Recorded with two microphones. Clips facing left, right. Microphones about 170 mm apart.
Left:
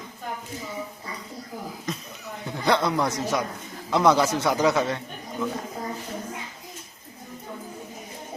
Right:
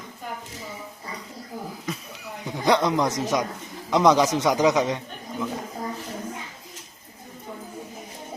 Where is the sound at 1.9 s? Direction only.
10° right (ahead or behind).